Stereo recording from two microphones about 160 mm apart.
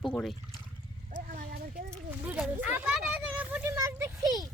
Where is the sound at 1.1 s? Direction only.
60° right (ahead or behind).